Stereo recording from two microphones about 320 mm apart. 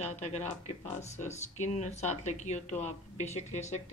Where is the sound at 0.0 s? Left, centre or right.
Centre.